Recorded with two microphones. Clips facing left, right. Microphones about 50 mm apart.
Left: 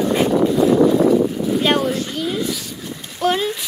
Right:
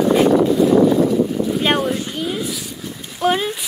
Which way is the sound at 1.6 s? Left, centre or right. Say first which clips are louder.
Left 2 dB; centre.